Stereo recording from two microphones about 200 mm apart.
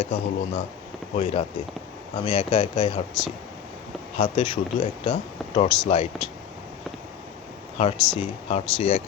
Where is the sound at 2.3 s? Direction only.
35° left (ahead or behind).